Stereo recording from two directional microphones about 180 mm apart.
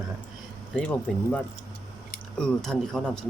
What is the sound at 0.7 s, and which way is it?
Speech, 5° left (ahead or behind).